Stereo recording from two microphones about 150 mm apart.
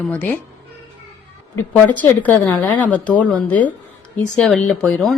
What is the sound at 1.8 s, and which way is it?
A woman's voice, 10° left (ahead or behind).